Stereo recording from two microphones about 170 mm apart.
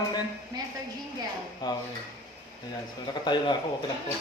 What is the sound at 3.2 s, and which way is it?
Speech, 25° left (ahead or behind).